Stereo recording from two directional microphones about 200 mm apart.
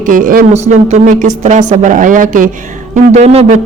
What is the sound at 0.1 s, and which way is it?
Speech, 45° right (ahead or behind).